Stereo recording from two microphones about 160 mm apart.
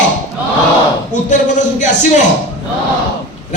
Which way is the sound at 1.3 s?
50° left (ahead or behind).